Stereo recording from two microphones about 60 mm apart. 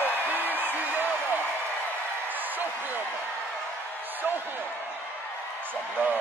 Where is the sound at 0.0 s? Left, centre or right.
Right.